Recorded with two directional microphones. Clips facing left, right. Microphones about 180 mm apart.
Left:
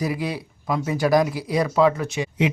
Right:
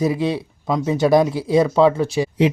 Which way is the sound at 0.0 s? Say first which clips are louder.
Right 6 dB; 25° right (ahead or behind).